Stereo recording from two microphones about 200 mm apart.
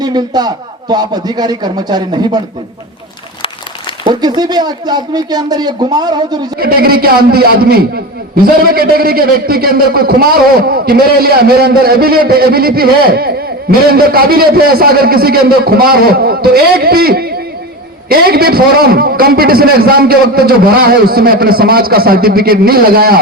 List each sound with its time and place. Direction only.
0.0 s speech: 20° right (ahead or behind)
4.0 s speech: 20° right (ahead or behind)
6.6 s a man's voice: 50° right (ahead or behind)